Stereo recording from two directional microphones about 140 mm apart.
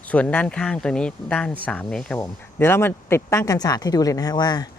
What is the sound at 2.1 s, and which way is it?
Speech, 15° left (ahead or behind).